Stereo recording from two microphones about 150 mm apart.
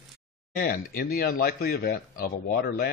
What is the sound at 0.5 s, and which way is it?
Speech, 75° left (ahead or behind).